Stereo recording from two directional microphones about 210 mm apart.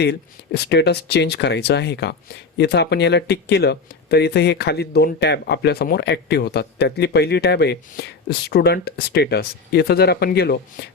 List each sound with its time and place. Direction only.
0.0 s speech: 50° left (ahead or behind)